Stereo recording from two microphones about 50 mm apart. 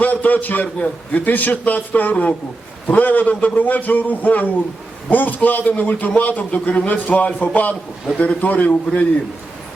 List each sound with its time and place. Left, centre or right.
0.0 s a man's voice: left